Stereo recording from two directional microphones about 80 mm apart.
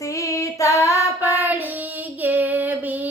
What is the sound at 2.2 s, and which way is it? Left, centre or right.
Female singing, right.